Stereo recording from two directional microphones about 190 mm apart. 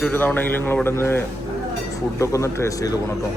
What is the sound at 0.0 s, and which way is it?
A man's voice, 10° left (ahead or behind).